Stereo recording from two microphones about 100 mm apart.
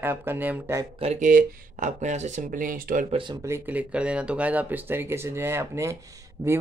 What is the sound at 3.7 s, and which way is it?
Speech, 15° right (ahead or behind).